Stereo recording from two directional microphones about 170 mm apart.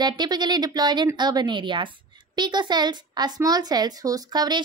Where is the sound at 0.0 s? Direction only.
25° right (ahead or behind).